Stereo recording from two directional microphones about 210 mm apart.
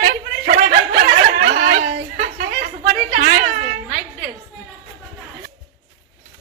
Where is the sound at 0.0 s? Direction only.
40° right (ahead or behind).